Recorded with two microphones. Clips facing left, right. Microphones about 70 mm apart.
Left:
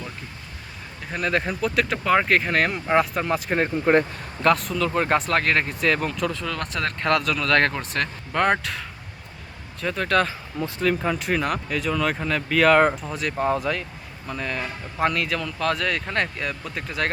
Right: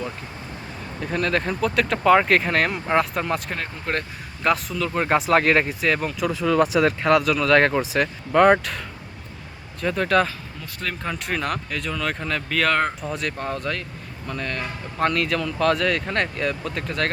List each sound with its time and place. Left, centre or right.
1.0 s speech: centre
3.5 s speech: left
4.4 s speech: centre
9.8 s speech: centre